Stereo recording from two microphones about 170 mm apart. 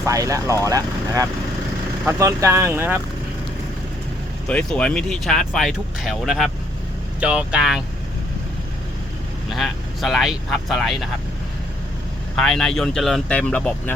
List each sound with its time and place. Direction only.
0.0 s speech: 20° right (ahead or behind)
4.4 s speech: 5° left (ahead or behind)
9.5 s speech: centre (ahead or behind)
12.4 s speech: centre (ahead or behind)